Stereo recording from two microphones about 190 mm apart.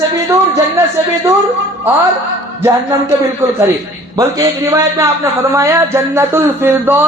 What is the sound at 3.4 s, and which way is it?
Speech, 10° right (ahead or behind).